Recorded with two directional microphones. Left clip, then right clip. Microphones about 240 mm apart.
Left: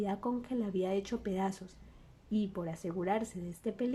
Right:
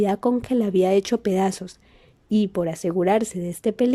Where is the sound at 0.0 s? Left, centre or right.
Right.